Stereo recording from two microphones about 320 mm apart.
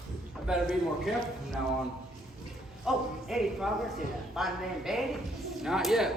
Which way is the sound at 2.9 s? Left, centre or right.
Centre.